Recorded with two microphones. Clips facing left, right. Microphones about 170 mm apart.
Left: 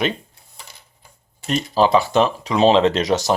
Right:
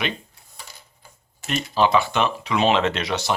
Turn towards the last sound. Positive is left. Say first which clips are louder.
# left 6 dB
turn(degrees=40)  # may be behind; listen again after turning